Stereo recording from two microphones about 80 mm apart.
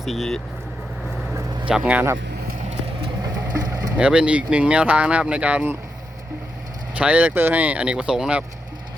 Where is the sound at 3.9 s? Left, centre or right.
Centre.